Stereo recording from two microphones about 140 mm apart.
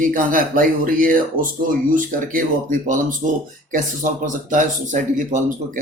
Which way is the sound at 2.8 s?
65° right (ahead or behind).